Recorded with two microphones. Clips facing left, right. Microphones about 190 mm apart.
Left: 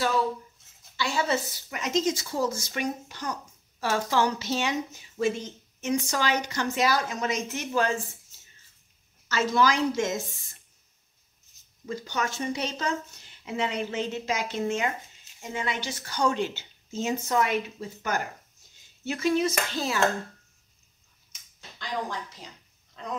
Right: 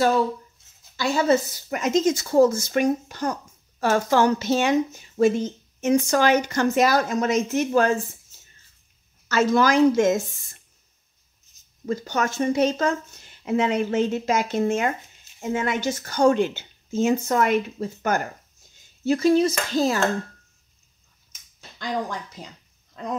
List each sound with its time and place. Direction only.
0.9 s speech: 45° right (ahead or behind)
9.3 s speech: 50° right (ahead or behind)
11.8 s speech: 45° right (ahead or behind)
19.0 s dishes: 35° right (ahead or behind)